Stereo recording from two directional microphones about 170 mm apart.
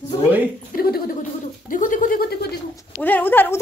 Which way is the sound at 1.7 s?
50° left (ahead or behind).